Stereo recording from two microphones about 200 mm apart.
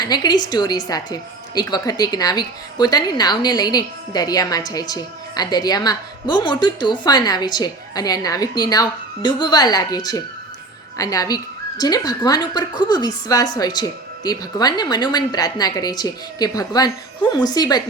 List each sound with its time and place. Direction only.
0.0 s a woman's voice: 20° left (ahead or behind)